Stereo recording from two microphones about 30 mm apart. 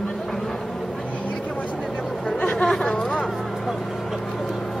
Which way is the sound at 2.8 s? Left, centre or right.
Left.